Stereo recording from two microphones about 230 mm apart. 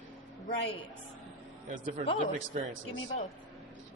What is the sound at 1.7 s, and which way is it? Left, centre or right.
Speech, right.